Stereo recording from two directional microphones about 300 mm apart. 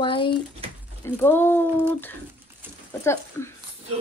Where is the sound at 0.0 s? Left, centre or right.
Centre.